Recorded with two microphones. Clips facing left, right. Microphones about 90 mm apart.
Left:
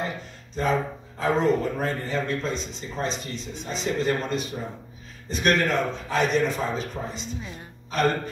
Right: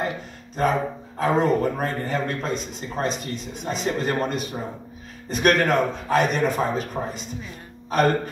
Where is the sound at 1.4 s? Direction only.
50° right (ahead or behind).